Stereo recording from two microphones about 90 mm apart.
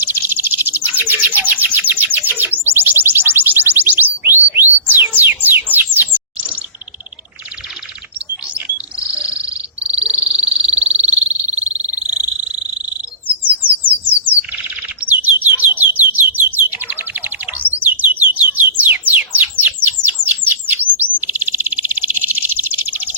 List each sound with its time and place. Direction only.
0.0 s bird: 25° right (ahead or behind)
8.5 s bird: 15° right (ahead or behind)
13.6 s bird: 20° right (ahead or behind)